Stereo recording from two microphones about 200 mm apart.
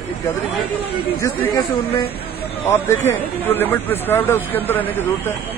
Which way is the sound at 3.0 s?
10° left (ahead or behind).